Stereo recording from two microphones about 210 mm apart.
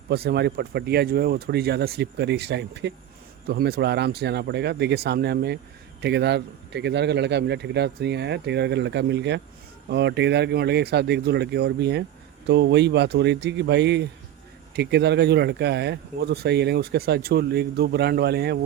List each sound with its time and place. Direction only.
0.1 s speech: 50° right (ahead or behind)